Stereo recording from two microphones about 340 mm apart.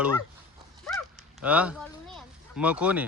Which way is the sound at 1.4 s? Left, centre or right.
Centre.